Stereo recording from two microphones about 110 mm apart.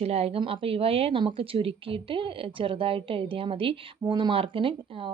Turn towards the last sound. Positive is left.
turn(degrees=-55)  # may be behind; listen again after turning